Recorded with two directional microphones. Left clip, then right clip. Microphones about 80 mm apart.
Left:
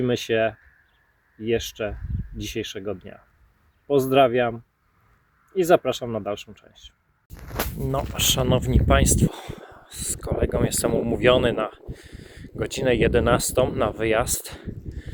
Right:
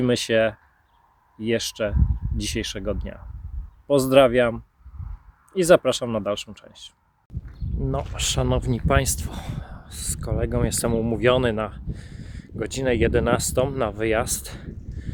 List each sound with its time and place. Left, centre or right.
0.1 s speech: right
5.5 s speech: right
7.9 s speech: right
8.7 s speech: right
9.5 s a sound: right
9.8 s speech: right